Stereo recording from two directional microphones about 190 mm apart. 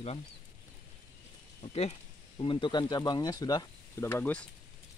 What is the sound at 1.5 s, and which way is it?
Speech, 35° left (ahead or behind).